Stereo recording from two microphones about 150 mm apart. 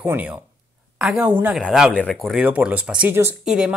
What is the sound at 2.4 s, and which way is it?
A woman's voice, 10° right (ahead or behind).